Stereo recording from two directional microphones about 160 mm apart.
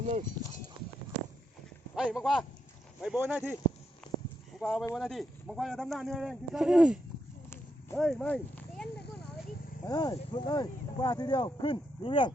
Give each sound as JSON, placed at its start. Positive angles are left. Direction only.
{"t": 0.0, "sound": "speech", "side_deg": -50}
{"t": 2.0, "sound": "a man's voice", "side_deg": -5}
{"t": 4.6, "sound": "a man's voice", "side_deg": 0}
{"t": 9.8, "sound": "speech", "side_deg": 25}